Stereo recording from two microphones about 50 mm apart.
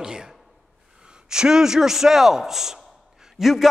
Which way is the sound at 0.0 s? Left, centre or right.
Centre.